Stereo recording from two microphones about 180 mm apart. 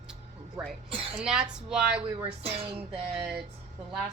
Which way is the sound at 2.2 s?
35° right (ahead or behind).